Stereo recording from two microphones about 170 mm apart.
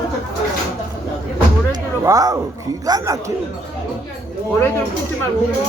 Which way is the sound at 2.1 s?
20° right (ahead or behind).